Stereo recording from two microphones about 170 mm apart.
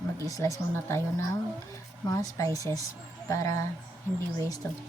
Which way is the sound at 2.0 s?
20° left (ahead or behind).